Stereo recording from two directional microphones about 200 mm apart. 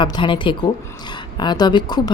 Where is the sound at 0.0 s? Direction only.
25° left (ahead or behind).